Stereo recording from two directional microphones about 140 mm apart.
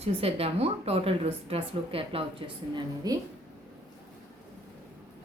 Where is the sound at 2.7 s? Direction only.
25° right (ahead or behind).